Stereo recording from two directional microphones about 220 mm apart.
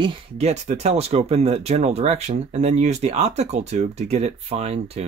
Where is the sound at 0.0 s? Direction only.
25° right (ahead or behind).